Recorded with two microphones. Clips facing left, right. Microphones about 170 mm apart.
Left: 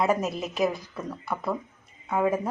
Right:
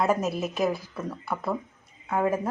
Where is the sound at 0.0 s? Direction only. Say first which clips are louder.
Even; 5° left (ahead or behind).